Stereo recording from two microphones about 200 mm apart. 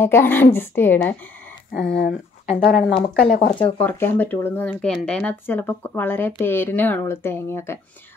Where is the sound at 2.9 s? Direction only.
30° left (ahead or behind).